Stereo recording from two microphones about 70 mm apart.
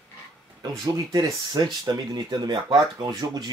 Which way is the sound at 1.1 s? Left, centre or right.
Right.